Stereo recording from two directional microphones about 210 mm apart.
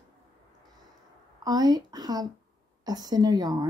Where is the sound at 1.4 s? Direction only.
20° right (ahead or behind).